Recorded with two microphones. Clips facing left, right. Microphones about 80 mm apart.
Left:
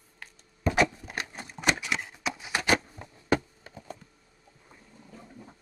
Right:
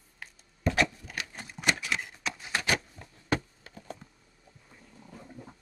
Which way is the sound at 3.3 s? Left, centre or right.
Centre.